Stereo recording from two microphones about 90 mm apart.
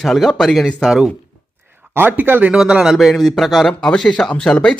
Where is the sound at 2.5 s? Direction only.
10° right (ahead or behind).